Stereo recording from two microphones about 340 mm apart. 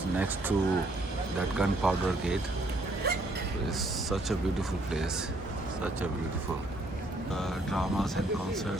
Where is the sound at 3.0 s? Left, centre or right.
Right.